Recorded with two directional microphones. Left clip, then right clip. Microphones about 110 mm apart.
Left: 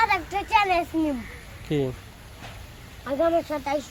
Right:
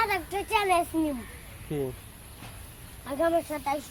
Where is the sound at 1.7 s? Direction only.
90° left.